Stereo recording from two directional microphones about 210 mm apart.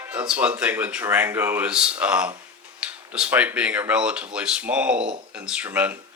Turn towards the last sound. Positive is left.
turn(degrees=-5)  # may be behind; listen again after turning